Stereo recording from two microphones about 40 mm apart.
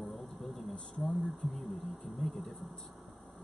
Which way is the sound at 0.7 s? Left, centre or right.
Left.